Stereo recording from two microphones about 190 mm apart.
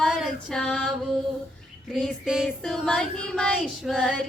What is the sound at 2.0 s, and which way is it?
Child singing, 5° right (ahead or behind).